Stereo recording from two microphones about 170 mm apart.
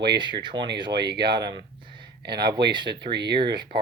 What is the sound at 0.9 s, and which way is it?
Speech, 80° right.